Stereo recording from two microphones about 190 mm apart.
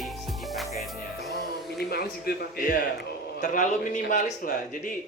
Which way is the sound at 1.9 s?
55° left (ahead or behind).